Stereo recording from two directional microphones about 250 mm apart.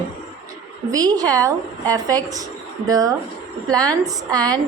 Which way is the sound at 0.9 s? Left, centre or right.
Centre.